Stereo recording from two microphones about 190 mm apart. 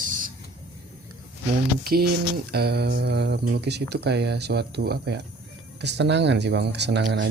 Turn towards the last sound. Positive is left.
turn(degrees=-65)  # may be behind; listen again after turning